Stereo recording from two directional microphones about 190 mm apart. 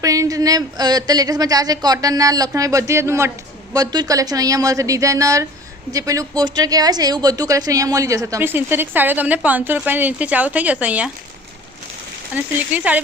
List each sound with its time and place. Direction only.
0.0 s speech: 15° right (ahead or behind)
12.3 s speech: 5° right (ahead or behind)